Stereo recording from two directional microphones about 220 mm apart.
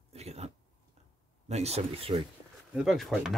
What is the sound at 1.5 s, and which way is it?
Speech, 30° right (ahead or behind).